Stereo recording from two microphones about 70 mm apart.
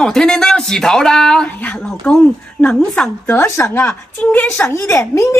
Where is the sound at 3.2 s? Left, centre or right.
Left.